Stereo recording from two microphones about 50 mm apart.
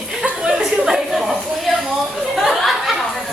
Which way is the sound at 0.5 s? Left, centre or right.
Centre.